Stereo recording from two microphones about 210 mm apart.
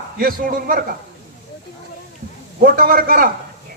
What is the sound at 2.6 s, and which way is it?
Speech, 45° right (ahead or behind).